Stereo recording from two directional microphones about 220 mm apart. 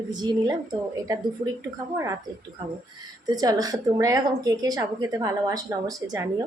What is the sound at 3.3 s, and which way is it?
A woman's voice, 15° right (ahead or behind).